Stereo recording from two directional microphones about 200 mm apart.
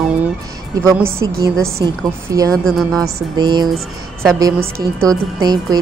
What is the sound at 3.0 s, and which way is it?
Speech, 20° right (ahead or behind).